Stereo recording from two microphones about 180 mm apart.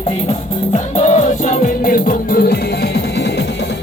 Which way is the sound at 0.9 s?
40° left (ahead or behind).